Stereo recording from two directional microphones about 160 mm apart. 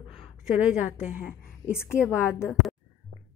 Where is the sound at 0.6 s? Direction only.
10° right (ahead or behind).